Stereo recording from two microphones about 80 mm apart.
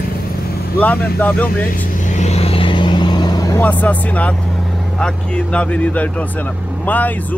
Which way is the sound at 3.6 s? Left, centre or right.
Centre.